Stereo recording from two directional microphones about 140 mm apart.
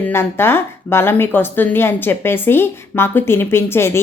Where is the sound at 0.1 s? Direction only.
15° left (ahead or behind).